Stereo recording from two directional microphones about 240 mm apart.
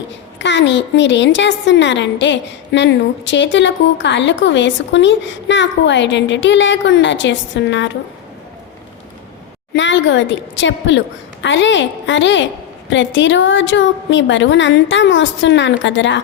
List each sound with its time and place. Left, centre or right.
0.3 s a woman's voice: left
9.7 s a woman's voice: left